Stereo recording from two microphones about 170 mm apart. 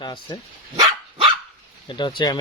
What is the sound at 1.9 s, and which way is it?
Speech, 25° left (ahead or behind).